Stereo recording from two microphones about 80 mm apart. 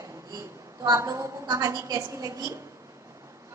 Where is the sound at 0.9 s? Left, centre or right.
Right.